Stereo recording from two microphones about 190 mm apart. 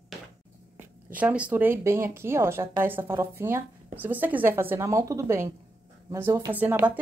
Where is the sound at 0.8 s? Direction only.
10° right (ahead or behind).